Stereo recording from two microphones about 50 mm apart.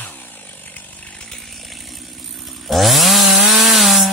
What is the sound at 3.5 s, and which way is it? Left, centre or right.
Rub, centre.